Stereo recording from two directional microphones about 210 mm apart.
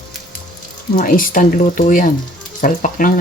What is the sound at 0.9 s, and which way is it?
Speech, 40° left (ahead or behind).